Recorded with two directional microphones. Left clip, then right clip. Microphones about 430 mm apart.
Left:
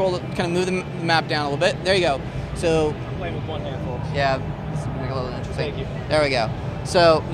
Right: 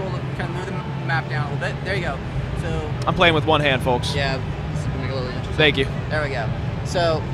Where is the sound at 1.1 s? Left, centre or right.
Left.